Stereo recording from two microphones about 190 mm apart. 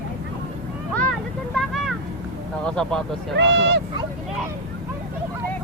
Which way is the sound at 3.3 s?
65° right (ahead or behind).